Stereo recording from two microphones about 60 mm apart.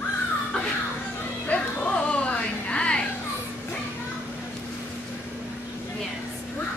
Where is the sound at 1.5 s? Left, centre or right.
Left.